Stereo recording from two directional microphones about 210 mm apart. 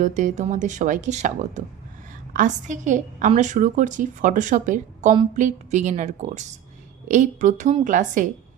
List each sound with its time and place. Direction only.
0.0 s a woman's voice: 35° right (ahead or behind)